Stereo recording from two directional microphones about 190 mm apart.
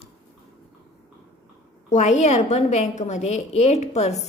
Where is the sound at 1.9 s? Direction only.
40° left (ahead or behind).